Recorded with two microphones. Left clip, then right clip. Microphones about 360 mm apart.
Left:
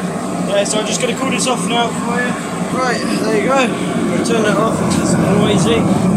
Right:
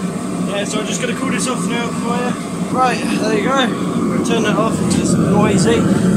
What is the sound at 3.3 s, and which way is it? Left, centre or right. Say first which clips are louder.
Speech: left 2 dB; centre.